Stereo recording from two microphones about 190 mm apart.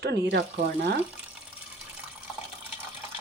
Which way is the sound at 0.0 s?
60° right (ahead or behind).